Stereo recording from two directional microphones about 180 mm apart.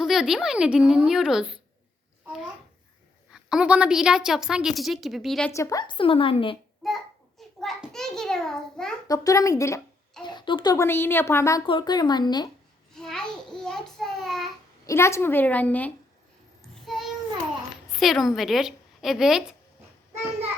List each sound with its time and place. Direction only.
0.0 s a woman's voice: centre (ahead or behind)
3.3 s a woman's voice: 5° right (ahead or behind)
5.5 s a woman's voice: 20° left (ahead or behind)
6.8 s a child's voice: centre (ahead or behind)
9.0 s a woman's voice: 20° left (ahead or behind)
11.6 s a woman's voice: 25° left (ahead or behind)
12.9 s a child's voice: 5° left (ahead or behind)
14.8 s a woman's voice: 15° left (ahead or behind)
16.8 s child singing: centre (ahead or behind)
17.9 s a woman's voice: centre (ahead or behind)